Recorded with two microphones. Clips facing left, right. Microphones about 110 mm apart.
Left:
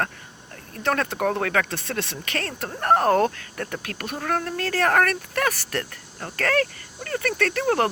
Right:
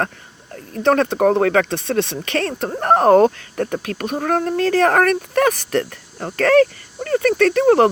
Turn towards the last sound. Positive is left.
turn(degrees=-25)  # may be behind; listen again after turning